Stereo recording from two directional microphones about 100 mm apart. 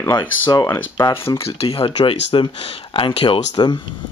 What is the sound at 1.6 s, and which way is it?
Speech, 65° left (ahead or behind).